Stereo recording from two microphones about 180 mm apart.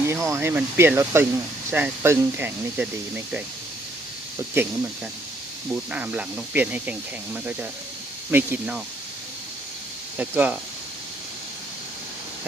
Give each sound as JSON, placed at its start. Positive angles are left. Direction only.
{"t": 0.1, "sound": "speech", "side_deg": -15}
{"t": 5.7, "sound": "speech", "side_deg": -10}
{"t": 8.3, "sound": "speech", "side_deg": -10}
{"t": 10.2, "sound": "speech", "side_deg": -10}